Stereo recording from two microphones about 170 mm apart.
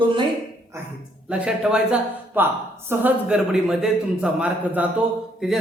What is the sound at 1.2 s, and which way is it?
Speech, 5° right (ahead or behind).